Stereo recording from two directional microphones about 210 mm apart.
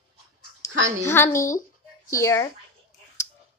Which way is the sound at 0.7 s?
65° right (ahead or behind).